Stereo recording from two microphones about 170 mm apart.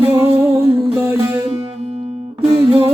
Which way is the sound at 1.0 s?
15° right (ahead or behind).